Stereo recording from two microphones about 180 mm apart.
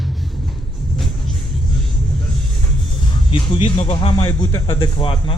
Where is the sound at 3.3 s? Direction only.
25° left (ahead or behind).